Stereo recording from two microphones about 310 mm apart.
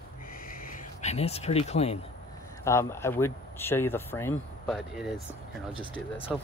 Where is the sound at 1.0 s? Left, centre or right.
Left.